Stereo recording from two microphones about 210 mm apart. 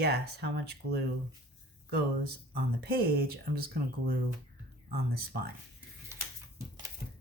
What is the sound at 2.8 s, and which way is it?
Speech, 45° right (ahead or behind).